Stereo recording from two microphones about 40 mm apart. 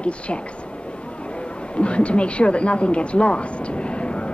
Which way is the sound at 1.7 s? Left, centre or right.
Left.